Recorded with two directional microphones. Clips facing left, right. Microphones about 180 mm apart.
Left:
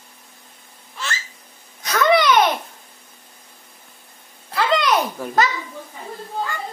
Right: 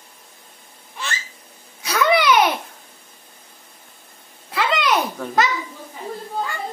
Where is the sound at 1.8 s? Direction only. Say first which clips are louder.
Left 1 dB; 10° right (ahead or behind).